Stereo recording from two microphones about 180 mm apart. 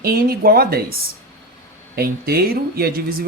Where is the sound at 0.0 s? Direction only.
55° right (ahead or behind).